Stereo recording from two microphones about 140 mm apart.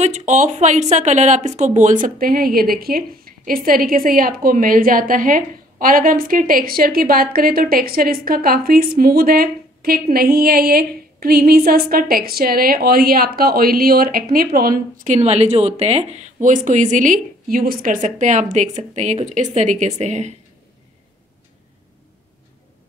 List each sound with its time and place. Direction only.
0.0 s speech: 55° right (ahead or behind); by 15.1 s 90° right
15.1 s speech: 50° right (ahead or behind)